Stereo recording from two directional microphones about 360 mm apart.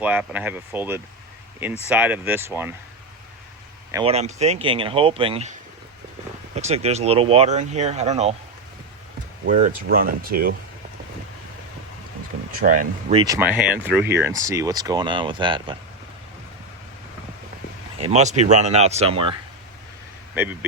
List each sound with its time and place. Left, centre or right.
0.0 s speech: centre
3.9 s speech: centre
6.6 s speech: centre
9.5 s speech: right
12.5 s speech: right
17.9 s speech: centre